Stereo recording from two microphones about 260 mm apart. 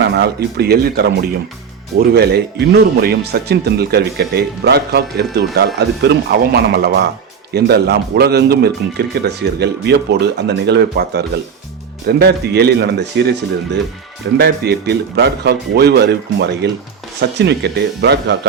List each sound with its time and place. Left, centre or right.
0.1 s speech: right
14.3 s speech: right